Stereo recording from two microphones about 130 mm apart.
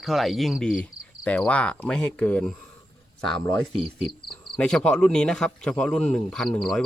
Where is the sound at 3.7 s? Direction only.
50° right (ahead or behind).